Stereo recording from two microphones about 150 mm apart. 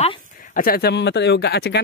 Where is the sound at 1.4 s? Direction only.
90° left.